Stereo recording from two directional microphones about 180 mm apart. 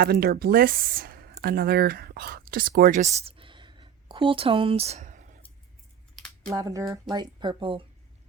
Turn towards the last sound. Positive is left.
turn(degrees=-30)  # may be behind; listen again after turning